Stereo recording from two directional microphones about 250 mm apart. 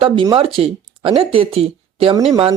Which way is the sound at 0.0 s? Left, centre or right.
Centre.